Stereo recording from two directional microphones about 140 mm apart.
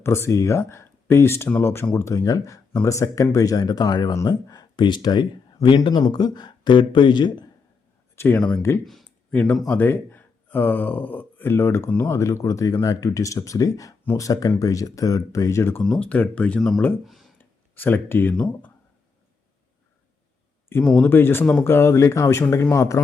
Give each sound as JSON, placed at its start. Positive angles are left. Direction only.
{"t": 0.0, "sound": "speech", "side_deg": 20}
{"t": 8.1, "sound": "speech", "side_deg": 15}
{"t": 15.8, "sound": "speech", "side_deg": 5}
{"t": 17.1, "sound": "a sound", "side_deg": 0}
{"t": 17.3, "sound": "a sound", "side_deg": 15}
{"t": 20.8, "sound": "speech", "side_deg": 5}
{"t": 21.1, "sound": "speech", "side_deg": 15}